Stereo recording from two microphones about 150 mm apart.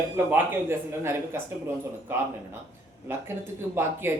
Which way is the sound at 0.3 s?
15° right (ahead or behind).